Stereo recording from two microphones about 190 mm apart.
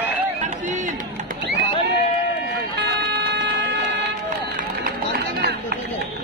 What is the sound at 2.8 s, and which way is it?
Music, 60° right (ahead or behind).